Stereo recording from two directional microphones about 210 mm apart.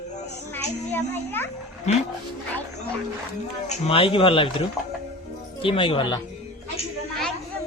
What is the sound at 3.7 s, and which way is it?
Speech, 25° left (ahead or behind).